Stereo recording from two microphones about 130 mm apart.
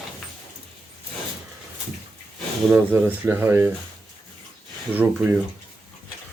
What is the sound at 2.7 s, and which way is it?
Speech, 15° right (ahead or behind).